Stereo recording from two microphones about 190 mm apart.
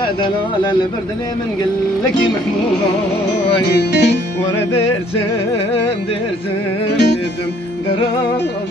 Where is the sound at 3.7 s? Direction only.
65° left (ahead or behind).